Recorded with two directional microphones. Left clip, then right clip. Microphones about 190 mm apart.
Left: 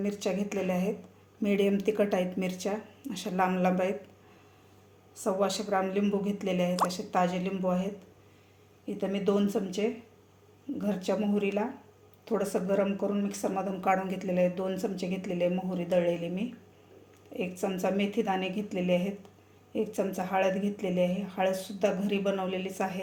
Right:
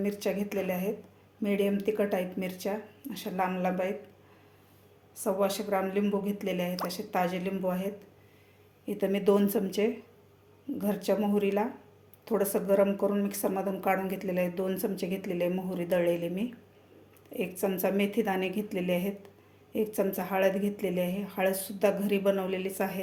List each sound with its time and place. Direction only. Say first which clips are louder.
0.0 s speech: even; 5° right (ahead or behind)
5.1 s speech: even; centre (ahead or behind)